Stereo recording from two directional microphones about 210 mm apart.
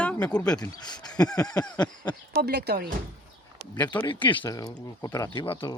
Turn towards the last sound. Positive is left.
turn(degrees=25)  # may be behind; listen again after turning